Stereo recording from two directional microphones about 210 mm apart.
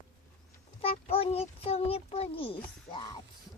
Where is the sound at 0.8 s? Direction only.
30° left (ahead or behind).